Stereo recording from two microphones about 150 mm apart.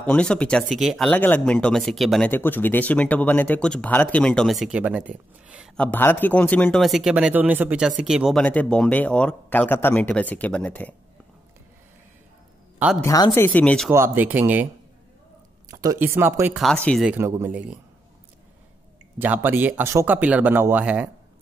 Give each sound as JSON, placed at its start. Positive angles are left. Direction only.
{"t": 0.0, "sound": "speech", "side_deg": 5}
{"t": 1.1, "sound": "speech", "side_deg": 10}
{"t": 2.3, "sound": "speech", "side_deg": 15}
{"t": 5.8, "sound": "speech", "side_deg": 10}
{"t": 6.8, "sound": "speech", "side_deg": 0}
{"t": 12.7, "sound": "music", "side_deg": -5}
{"t": 13.0, "sound": "speech", "side_deg": 20}
{"t": 13.9, "sound": "speech", "side_deg": -15}
{"t": 15.7, "sound": "a sound", "side_deg": -25}
{"t": 16.0, "sound": "speech", "side_deg": -15}
{"t": 19.1, "sound": "speech", "side_deg": -10}